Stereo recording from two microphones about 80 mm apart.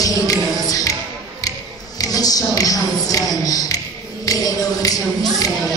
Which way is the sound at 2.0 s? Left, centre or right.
Left.